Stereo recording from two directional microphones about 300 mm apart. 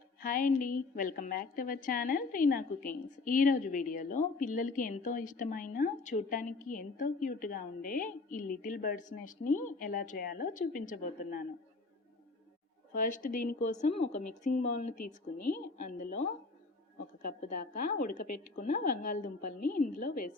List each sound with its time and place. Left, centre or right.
0.2 s a woman's voice: left
12.9 s a woman's voice: left
17.2 s a woman's voice: left